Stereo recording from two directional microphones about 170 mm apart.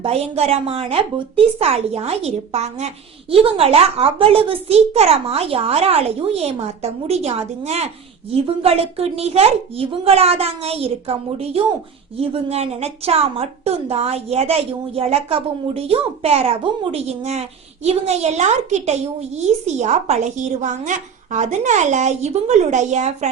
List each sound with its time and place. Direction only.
0.0 s a woman's voice: 35° right (ahead or behind)